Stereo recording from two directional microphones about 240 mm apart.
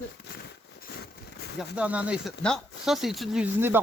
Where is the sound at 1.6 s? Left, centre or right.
Centre.